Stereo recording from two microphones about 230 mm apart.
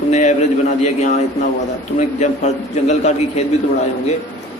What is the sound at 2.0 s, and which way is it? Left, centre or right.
A man's voice, left.